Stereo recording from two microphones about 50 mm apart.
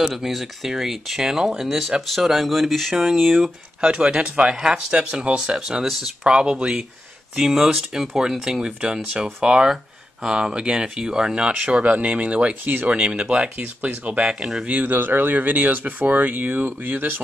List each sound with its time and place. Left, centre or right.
0.0 s speech: centre
3.8 s speech: centre
5.6 s speech: centre
6.4 s speech: right
7.3 s speech: centre; by 12.5 s right
12.6 s speech: right
12.9 s speech: centre
14.4 s speech: centre
14.7 s speech: right